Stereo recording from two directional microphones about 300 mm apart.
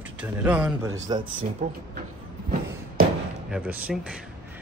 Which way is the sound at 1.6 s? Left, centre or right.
Right.